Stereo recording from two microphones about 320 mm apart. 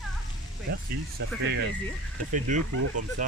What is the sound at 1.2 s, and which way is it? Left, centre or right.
Speech, right.